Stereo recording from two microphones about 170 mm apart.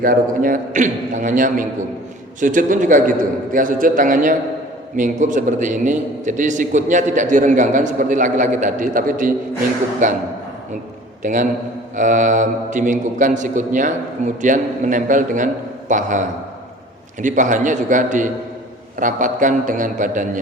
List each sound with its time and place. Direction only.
0.0 s a man's voice: 55° right (ahead or behind)
11.2 s a man's voice: 50° right (ahead or behind)